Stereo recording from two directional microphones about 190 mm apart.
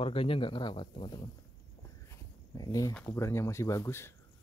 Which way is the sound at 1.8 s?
15° left (ahead or behind).